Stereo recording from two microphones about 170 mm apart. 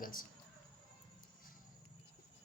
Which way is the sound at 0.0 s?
55° left (ahead or behind).